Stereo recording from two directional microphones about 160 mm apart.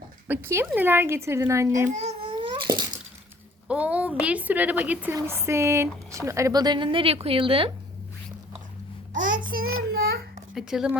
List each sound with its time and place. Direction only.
0.3 s speech: 15° right (ahead or behind)
1.9 s babbling: 45° right (ahead or behind); by 2.8 s 30° right (ahead or behind)
3.7 s a woman's voice: 10° right (ahead or behind); by 7.7 s 35° right (ahead or behind)
9.1 s child singing: 55° right (ahead or behind)
10.5 s speech: 5° right (ahead or behind)